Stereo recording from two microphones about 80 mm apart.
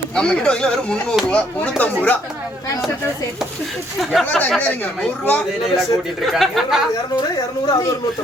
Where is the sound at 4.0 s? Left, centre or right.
Centre.